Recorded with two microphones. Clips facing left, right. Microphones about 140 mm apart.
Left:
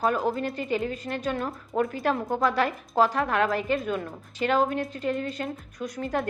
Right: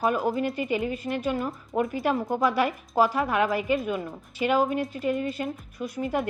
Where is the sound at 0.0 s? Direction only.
5° right (ahead or behind).